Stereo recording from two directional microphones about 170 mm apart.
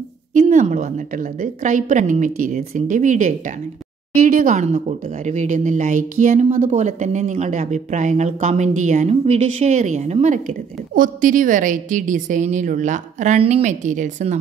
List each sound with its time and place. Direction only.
0.3 s speech: 45° right (ahead or behind)